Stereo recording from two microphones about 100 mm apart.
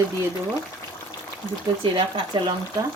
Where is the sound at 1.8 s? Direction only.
55° right (ahead or behind).